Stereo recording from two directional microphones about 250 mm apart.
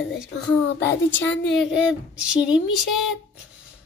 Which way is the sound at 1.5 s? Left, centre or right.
Centre.